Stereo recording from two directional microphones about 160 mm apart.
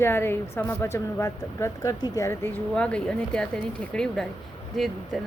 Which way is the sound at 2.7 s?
5° left (ahead or behind).